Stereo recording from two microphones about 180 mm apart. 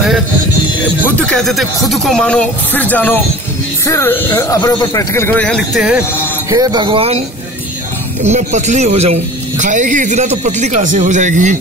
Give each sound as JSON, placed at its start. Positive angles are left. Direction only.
{"t": 1.0, "sound": "speech", "side_deg": 5}
{"t": 5.8, "sound": "speech", "side_deg": -5}
{"t": 6.5, "sound": "speech", "side_deg": -20}
{"t": 8.2, "sound": "speech", "side_deg": -40}